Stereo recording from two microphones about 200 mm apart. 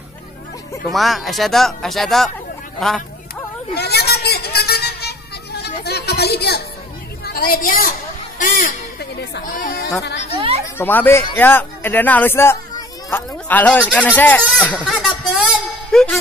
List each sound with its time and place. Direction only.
0.8 s speech: centre (ahead or behind)
3.7 s a sound: 55° left (ahead or behind)
7.3 s a woman's voice: 45° left (ahead or behind)
10.3 s speech: 25° right (ahead or behind)
10.8 s speech: 10° left (ahead or behind)
15.9 s music: centre (ahead or behind)